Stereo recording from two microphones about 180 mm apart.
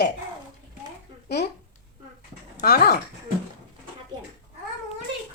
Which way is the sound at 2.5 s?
60° left (ahead or behind).